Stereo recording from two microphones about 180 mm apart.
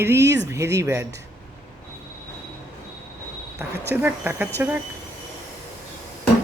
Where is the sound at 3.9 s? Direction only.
10° right (ahead or behind).